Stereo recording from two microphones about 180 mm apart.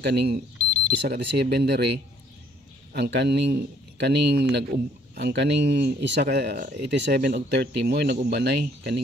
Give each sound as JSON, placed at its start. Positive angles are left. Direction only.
{"t": 0.0, "sound": "speech", "side_deg": -65}